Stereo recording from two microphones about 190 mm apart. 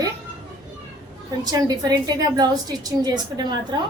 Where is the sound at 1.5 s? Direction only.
20° right (ahead or behind).